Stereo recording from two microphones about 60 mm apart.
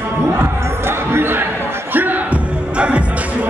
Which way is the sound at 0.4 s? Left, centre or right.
Right.